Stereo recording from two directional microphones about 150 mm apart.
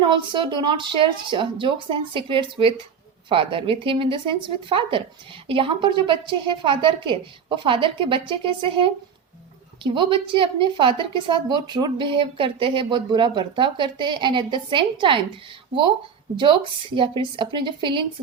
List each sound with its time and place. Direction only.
0.1 s a woman's voice: 35° right (ahead or behind)
16.4 s a woman's voice: 35° right (ahead or behind)